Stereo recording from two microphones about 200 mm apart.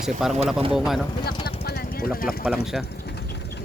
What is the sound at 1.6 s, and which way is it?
Vehicle, 55° left (ahead or behind).